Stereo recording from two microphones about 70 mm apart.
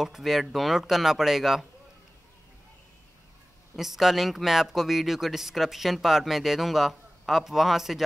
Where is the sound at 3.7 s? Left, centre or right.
Centre.